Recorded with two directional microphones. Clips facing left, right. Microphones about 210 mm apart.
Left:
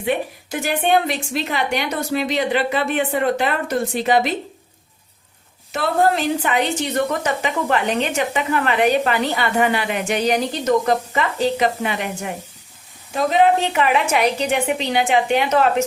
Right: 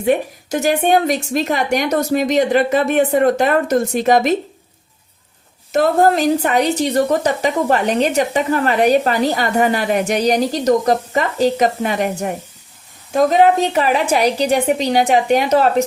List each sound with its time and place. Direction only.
0.0 s a woman's voice: 45° right (ahead or behind)
5.7 s a woman's voice: 45° right (ahead or behind)